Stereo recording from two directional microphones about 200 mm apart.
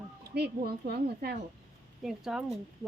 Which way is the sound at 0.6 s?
50° right (ahead or behind).